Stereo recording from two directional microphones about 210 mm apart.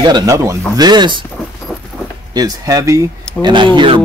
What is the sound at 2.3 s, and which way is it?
Speech, 20° right (ahead or behind).